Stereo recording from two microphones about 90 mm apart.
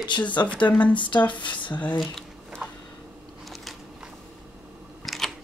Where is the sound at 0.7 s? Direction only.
15° left (ahead or behind).